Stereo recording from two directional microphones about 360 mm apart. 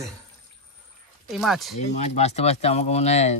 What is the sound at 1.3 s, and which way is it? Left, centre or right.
Speech, centre.